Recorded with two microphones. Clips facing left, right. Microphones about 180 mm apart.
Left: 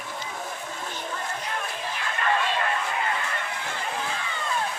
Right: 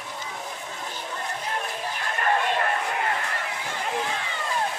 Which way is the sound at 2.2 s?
50° right (ahead or behind).